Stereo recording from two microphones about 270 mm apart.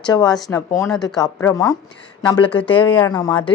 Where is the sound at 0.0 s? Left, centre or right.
Centre.